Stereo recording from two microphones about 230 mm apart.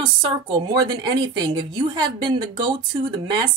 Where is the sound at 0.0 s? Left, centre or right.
Centre.